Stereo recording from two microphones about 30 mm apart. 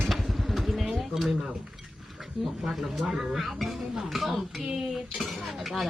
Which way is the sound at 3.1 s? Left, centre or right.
Centre.